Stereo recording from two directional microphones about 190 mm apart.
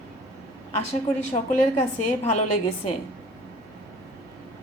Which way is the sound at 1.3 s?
35° left (ahead or behind).